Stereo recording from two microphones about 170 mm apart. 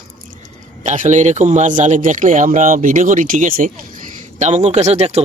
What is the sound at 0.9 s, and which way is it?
Speech, 45° right (ahead or behind).